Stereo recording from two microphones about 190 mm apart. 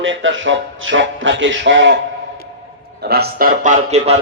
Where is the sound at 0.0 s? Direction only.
90° right; by 2.0 s 70° right (ahead or behind).